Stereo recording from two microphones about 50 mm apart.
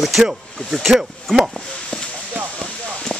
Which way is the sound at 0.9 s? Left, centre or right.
Centre.